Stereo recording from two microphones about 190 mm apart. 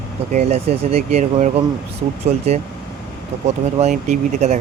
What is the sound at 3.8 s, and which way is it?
Speech, 40° right (ahead or behind).